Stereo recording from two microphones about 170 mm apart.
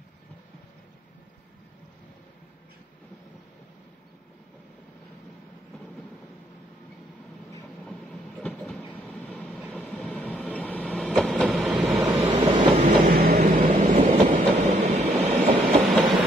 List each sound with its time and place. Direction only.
8.4 s train: 5° left (ahead or behind)
11.3 s vehicle: centre (ahead or behind)
12.4 s train: 25° right (ahead or behind)
12.7 s train: 50° right (ahead or behind)
13.6 s train: 40° right (ahead or behind)